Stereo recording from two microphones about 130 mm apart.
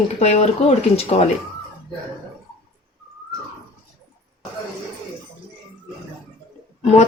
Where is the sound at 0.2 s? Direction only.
55° left (ahead or behind).